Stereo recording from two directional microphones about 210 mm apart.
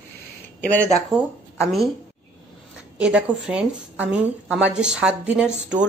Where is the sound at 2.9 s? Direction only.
5° right (ahead or behind).